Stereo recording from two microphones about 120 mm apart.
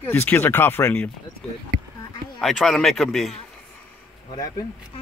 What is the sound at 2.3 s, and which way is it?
A man's voice, centre (ahead or behind).